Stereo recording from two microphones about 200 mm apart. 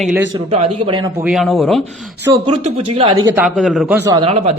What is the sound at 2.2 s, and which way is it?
Speech, 20° right (ahead or behind).